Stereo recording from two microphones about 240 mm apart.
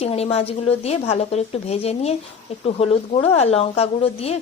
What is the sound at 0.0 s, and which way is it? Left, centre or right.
Speech, left.